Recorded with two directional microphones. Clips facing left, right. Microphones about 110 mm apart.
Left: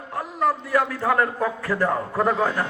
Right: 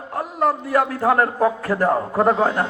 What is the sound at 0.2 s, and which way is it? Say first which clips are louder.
A man's voice: right 3 dB; 40° right (ahead or behind).